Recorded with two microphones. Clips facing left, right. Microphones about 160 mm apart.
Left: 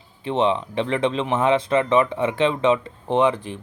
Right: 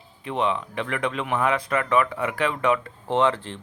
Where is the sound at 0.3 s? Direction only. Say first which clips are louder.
Left 5 dB; 30° left (ahead or behind).